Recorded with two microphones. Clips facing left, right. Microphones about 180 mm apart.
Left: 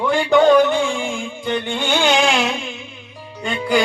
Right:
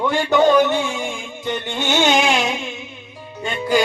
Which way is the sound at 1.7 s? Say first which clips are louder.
Right 1 dB; 20° right (ahead or behind).